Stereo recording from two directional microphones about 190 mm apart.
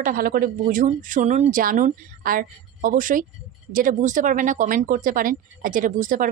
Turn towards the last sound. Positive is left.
turn(degrees=-45)  # may be behind; listen again after turning